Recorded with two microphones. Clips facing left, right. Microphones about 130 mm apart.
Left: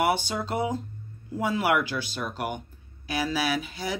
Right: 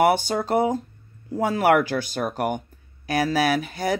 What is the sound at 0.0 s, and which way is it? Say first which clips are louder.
Speech: right 6 dB; 50° right (ahead or behind).